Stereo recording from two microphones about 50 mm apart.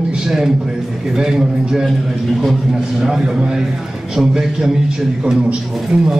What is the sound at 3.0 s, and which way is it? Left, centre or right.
A man's voice, centre.